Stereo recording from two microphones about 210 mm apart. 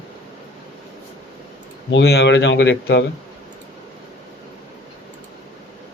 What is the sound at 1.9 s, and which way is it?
Speech, 55° left (ahead or behind).